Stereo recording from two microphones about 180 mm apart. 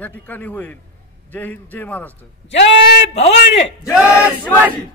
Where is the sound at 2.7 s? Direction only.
75° left (ahead or behind).